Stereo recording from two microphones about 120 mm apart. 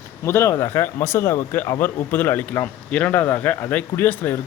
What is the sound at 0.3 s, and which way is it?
Speech, 25° left (ahead or behind).